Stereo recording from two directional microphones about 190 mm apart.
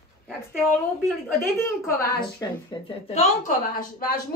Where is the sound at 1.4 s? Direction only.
15° left (ahead or behind).